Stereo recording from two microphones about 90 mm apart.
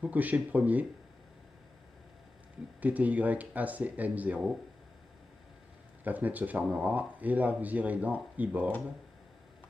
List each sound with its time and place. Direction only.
0.0 s speech: 15° right (ahead or behind)
2.8 s speech: 15° right (ahead or behind)
6.0 s speech: 20° right (ahead or behind)